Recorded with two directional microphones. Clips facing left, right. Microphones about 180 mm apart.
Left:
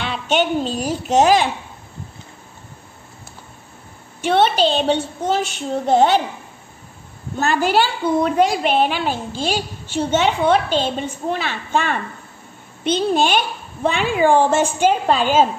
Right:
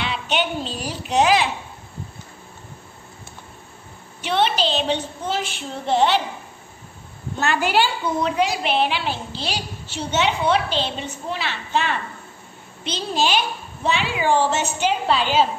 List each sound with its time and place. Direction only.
0.0 s a child's voice: 45° left (ahead or behind)
4.2 s a woman's voice: 50° left (ahead or behind)
7.4 s a woman's voice: 40° left (ahead or behind)